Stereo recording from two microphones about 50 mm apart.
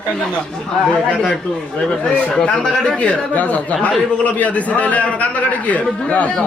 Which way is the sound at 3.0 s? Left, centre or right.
Left.